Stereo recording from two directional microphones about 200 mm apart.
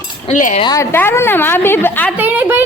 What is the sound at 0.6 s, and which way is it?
A woman's voice, 15° left (ahead or behind).